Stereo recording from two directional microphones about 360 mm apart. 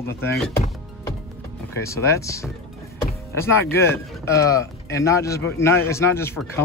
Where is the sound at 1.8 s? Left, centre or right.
Centre.